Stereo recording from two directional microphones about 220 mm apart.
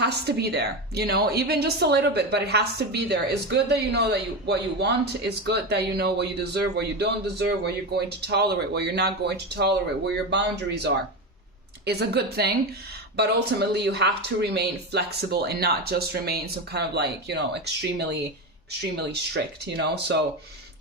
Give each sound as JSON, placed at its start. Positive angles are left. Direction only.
{"t": 0.0, "sound": "a woman's voice", "side_deg": -50}
{"t": 19.3, "sound": "a woman's voice", "side_deg": -50}